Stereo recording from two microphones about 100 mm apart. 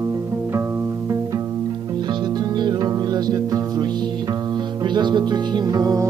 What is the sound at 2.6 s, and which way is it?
Music, 40° right (ahead or behind).